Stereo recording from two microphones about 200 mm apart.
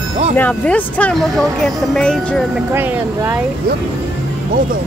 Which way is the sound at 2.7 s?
10° right (ahead or behind).